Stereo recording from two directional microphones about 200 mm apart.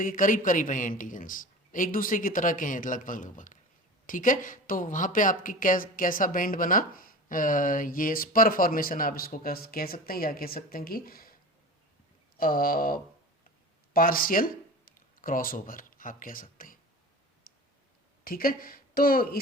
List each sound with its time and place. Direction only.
0.0 s a man's voice: 40° left (ahead or behind)
12.4 s a woman's voice: 45° left (ahead or behind)
17.5 s clicking: 45° left (ahead or behind)
18.3 s speech: 45° left (ahead or behind)